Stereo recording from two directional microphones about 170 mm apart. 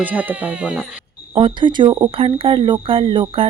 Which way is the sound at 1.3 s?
30° right (ahead or behind).